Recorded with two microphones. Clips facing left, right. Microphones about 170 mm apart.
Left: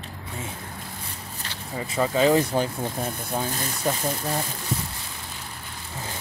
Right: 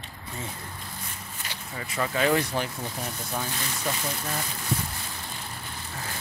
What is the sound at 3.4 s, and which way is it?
Speech, 45° left (ahead or behind).